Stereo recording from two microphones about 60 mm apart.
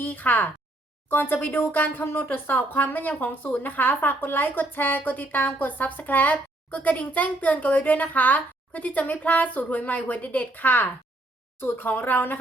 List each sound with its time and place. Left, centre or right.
0.0 s speech: left